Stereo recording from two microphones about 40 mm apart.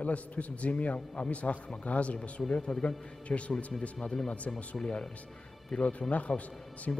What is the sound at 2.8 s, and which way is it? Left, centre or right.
Speech, left.